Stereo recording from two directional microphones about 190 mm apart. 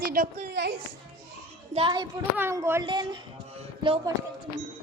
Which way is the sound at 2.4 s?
15° right (ahead or behind).